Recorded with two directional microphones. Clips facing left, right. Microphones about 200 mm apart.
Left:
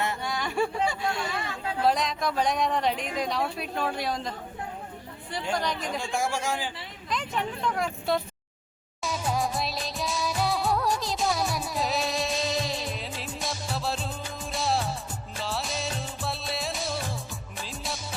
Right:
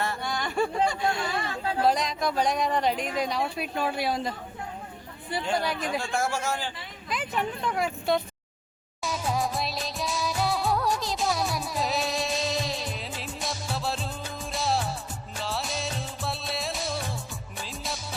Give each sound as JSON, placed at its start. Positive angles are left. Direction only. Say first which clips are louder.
{"t": 0.3, "sound": "a sound", "louder": "even", "side_deg": 5}
{"t": 1.3, "sound": "speech", "louder": "right 2 dB", "side_deg": -35}
{"t": 1.9, "sound": "speech", "louder": "even", "side_deg": 0}
{"t": 6.0, "sound": "speech", "louder": "even", "side_deg": 15}
{"t": 7.1, "sound": "speech", "louder": "right 1 dB", "side_deg": -5}
{"t": 9.0, "sound": "music", "louder": "even", "side_deg": 0}
{"t": 15.4, "sound": "music of bollywood", "louder": "even", "side_deg": 0}
{"t": 17.6, "sound": "music", "louder": "even", "side_deg": 0}